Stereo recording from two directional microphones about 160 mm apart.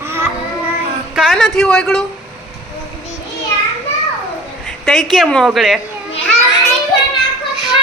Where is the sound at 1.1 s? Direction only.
Centre (ahead or behind).